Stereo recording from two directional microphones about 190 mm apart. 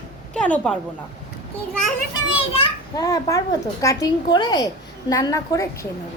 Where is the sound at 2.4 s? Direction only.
30° left (ahead or behind).